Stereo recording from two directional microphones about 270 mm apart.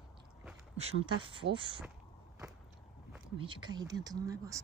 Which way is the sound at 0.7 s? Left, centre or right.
Right.